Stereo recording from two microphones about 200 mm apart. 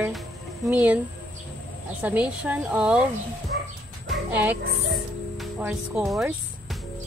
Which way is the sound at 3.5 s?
60° right (ahead or behind).